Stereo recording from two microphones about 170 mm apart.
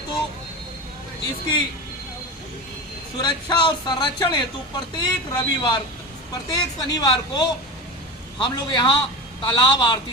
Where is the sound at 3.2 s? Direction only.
25° left (ahead or behind).